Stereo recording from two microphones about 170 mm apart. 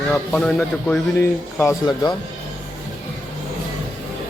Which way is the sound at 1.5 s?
15° left (ahead or behind).